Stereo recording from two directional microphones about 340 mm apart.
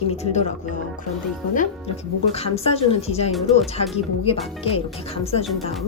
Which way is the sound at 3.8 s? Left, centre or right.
Centre.